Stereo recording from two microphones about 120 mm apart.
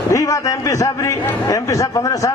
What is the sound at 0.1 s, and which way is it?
A man's voice, 25° left (ahead or behind).